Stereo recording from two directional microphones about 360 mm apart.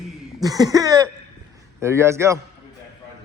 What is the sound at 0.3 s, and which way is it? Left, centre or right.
Throat clearing, centre.